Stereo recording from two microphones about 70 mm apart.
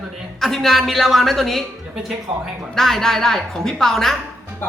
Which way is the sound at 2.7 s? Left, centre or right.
Centre.